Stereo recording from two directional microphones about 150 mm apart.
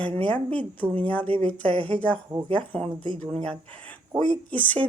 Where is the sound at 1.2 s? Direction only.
40° right (ahead or behind).